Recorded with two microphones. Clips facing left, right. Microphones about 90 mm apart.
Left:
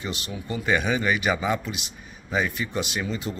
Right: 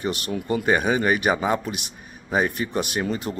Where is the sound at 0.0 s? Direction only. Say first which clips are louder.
Right 6 dB; 50° right (ahead or behind).